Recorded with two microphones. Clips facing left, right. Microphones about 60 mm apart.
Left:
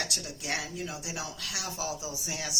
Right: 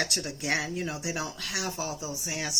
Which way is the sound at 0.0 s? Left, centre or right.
Right.